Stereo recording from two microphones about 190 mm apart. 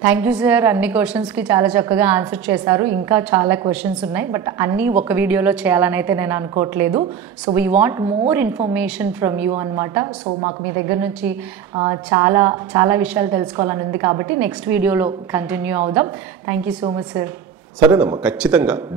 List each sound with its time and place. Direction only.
0.0 s a woman's voice: 5° right (ahead or behind)
11.7 s a woman's voice: 25° right (ahead or behind)
12.1 s a woman's voice: 10° right (ahead or behind)